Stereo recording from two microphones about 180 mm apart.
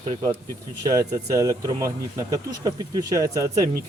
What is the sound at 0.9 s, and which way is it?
Speech, 15° right (ahead or behind).